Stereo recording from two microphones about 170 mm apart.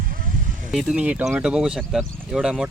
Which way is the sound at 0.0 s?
55° right (ahead or behind).